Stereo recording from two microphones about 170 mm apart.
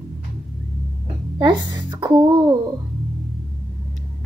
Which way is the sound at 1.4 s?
25° right (ahead or behind).